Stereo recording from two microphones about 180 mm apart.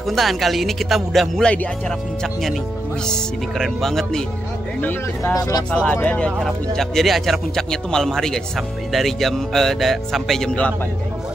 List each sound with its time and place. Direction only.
0.0 s speech: centre (ahead or behind)
3.1 s speech: centre (ahead or behind)
4.8 s speech: 15° left (ahead or behind)
5.9 s speech: 5° left (ahead or behind)